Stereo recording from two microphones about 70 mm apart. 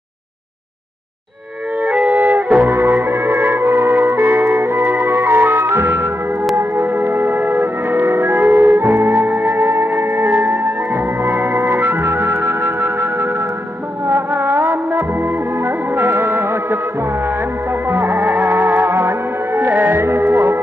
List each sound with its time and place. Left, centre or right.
1.8 s music: right
17.8 s music: right